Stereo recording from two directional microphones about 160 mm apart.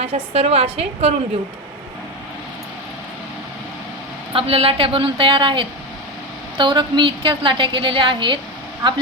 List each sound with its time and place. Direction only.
0.0 s a woman's voice: 40° right (ahead or behind)
4.4 s a woman's voice: 35° right (ahead or behind)